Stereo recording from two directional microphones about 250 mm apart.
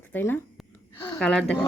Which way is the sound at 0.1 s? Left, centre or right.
Centre.